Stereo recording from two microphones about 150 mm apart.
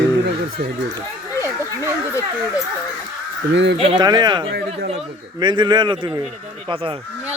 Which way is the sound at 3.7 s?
40° right (ahead or behind).